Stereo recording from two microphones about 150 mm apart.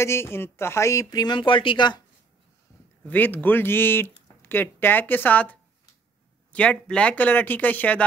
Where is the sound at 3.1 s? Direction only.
10° left (ahead or behind).